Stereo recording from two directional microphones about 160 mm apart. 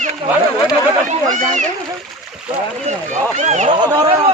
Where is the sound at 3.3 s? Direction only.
45° right (ahead or behind).